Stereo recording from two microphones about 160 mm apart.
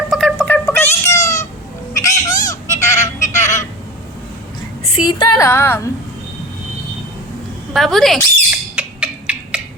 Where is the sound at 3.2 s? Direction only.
20° left (ahead or behind).